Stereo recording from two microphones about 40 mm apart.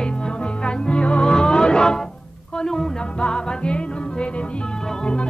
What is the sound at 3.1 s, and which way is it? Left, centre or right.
Music, left.